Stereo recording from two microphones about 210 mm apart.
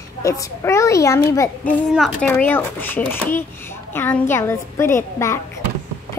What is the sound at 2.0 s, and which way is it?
A child's voice, centre (ahead or behind).